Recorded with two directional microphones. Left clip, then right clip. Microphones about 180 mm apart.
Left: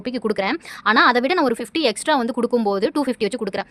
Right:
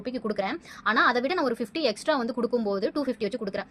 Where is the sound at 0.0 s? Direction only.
45° left (ahead or behind).